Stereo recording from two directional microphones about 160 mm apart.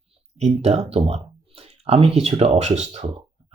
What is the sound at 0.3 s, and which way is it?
Speech, 40° right (ahead or behind).